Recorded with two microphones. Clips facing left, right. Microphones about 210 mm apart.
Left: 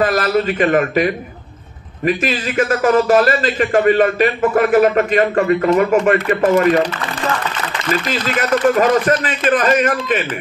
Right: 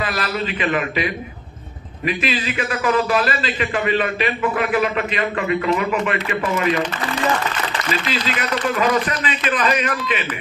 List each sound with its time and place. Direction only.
0.0 s a man's voice: 45° left (ahead or behind)
7.9 s a man's voice: 50° left (ahead or behind)